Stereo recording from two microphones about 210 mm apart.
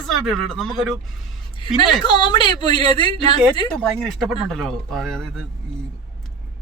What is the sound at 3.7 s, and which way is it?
Speech, 5° left (ahead or behind).